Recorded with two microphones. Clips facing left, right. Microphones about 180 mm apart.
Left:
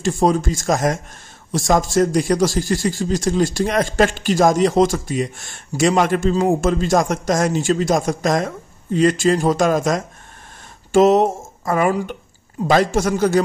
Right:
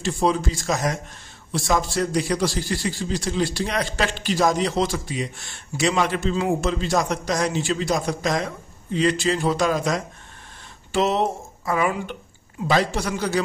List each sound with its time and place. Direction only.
0.0 s a man's voice: 45° left (ahead or behind)